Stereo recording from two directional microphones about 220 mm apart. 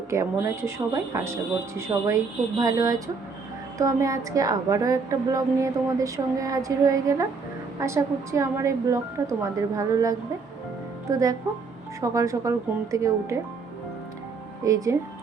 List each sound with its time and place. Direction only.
0.1 s a woman's voice: 15° right (ahead or behind)
14.6 s a woman's voice: 15° right (ahead or behind)